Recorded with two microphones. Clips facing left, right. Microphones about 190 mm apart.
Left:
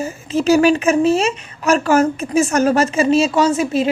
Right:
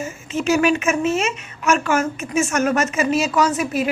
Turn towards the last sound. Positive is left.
turn(degrees=25)  # may be behind; listen again after turning